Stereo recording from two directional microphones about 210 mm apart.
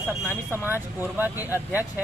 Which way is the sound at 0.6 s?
10° right (ahead or behind).